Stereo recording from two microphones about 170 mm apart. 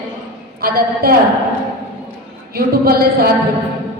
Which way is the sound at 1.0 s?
65° right (ahead or behind).